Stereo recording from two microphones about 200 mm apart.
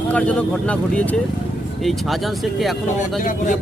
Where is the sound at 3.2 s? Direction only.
40° left (ahead or behind).